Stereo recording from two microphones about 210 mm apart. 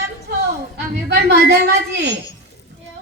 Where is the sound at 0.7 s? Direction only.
50° right (ahead or behind).